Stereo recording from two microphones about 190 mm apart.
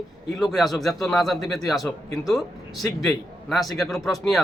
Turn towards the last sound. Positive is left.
turn(degrees=0)  # may be behind; listen again after turning